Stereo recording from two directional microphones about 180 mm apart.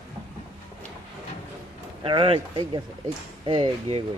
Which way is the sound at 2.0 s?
30° right (ahead or behind).